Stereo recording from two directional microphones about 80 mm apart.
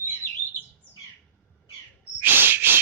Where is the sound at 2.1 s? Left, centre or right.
Right.